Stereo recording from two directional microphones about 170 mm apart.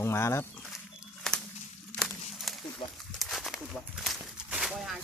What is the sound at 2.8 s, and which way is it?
Speech, 35° left (ahead or behind).